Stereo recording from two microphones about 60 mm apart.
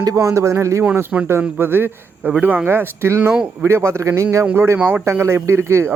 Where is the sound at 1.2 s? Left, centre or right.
Right.